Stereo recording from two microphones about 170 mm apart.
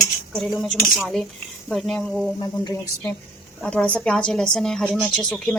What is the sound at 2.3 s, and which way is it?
Speech, 25° left (ahead or behind).